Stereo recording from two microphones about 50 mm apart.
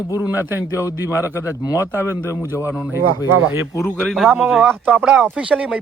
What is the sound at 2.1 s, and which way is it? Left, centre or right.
Speech, right.